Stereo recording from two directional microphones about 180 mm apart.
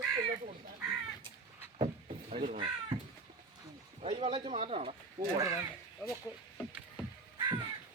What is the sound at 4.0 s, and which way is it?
Speech, 30° right (ahead or behind).